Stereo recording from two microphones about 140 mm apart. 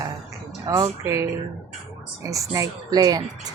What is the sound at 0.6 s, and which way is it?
Speech, 25° right (ahead or behind).